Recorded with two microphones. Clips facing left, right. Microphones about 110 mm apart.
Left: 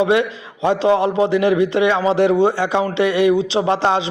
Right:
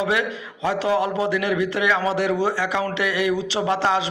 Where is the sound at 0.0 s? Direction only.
25° left (ahead or behind).